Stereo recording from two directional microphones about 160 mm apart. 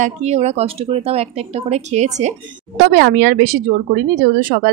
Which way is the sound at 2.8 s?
75° right (ahead or behind).